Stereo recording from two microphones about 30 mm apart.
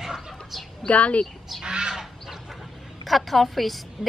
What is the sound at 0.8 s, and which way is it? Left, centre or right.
Speech, left.